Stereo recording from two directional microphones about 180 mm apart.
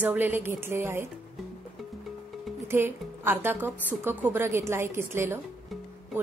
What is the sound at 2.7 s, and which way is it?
Speech, 15° right (ahead or behind).